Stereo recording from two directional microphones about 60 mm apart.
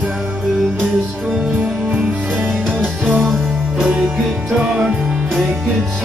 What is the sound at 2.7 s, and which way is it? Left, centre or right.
Music, right.